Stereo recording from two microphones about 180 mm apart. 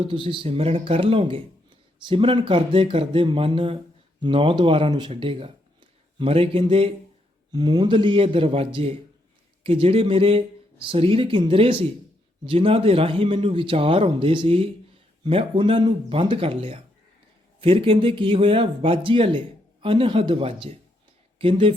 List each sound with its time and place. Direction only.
0.0 s speech: 30° right (ahead or behind)